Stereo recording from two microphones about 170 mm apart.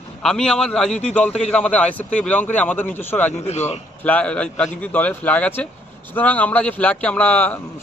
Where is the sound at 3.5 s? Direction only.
40° left (ahead or behind).